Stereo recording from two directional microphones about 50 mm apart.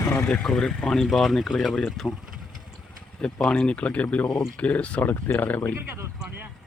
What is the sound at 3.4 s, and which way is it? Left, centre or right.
Speech, left.